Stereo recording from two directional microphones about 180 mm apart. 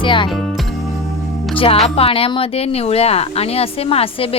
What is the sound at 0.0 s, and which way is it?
Speech, 25° left (ahead or behind).